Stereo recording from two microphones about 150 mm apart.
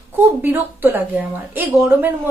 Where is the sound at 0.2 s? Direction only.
15° right (ahead or behind).